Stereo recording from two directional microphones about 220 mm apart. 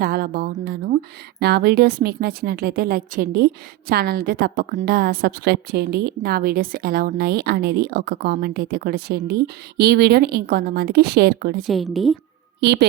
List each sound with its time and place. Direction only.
0.0 s a woman's voice: 45° right (ahead or behind)
11.6 s a woman's voice: centre (ahead or behind)
12.5 s a woman's voice: 50° right (ahead or behind)